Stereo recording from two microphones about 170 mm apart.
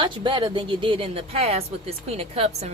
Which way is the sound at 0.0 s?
30° right (ahead or behind).